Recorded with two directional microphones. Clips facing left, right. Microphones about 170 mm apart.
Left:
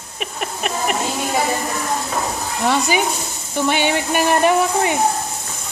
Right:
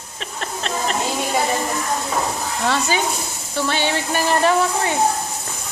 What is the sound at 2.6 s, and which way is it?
A man's voice, 15° left (ahead or behind).